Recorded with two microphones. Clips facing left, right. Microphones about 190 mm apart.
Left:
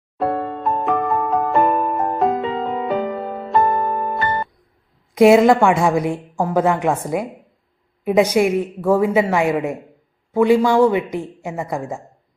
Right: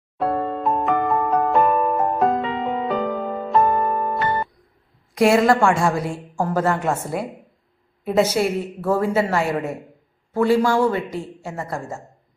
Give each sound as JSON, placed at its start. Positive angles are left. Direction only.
{"t": 0.2, "sound": "music", "side_deg": 0}
{"t": 5.1, "sound": "a woman's voice", "side_deg": 20}